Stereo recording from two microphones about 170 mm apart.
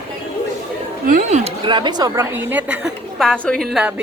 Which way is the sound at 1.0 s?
40° right (ahead or behind).